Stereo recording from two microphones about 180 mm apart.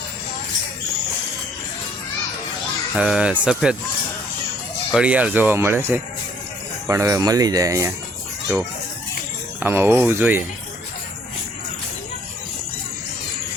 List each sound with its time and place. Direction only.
2.9 s speech: 5° right (ahead or behind)
4.9 s speech: 5° right (ahead or behind)
9.6 s speech: 10° right (ahead or behind)